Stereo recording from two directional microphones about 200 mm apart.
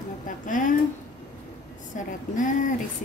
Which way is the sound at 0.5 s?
40° left (ahead or behind).